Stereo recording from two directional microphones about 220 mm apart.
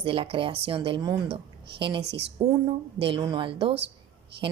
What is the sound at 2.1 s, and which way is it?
Speech, 50° right (ahead or behind).